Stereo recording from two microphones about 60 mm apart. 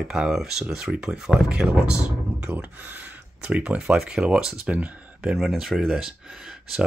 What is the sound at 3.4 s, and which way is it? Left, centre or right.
Speech, centre.